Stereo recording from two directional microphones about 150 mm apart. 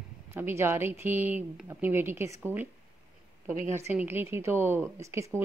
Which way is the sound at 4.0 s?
15° right (ahead or behind).